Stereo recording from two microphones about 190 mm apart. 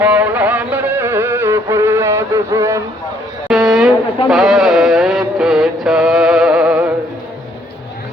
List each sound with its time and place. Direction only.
0.0 s music: 10° right (ahead or behind)
3.5 s a sound: centre (ahead or behind)
4.3 s music: centre (ahead or behind)